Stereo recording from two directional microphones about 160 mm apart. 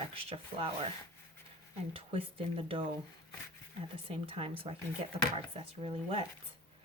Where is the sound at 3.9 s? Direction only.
35° right (ahead or behind).